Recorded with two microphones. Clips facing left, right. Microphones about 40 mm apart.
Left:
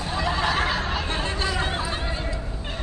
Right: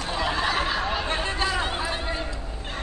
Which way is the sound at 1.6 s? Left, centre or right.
Centre.